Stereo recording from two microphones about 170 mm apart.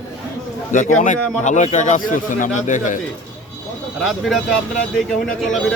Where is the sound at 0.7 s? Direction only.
50° left (ahead or behind).